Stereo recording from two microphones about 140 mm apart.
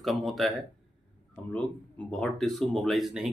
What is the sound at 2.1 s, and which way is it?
Speech, 5° left (ahead or behind).